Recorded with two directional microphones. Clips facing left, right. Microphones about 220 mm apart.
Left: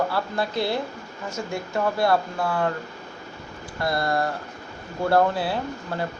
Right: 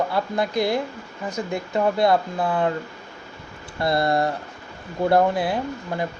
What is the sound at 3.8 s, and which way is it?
Speech, 25° right (ahead or behind).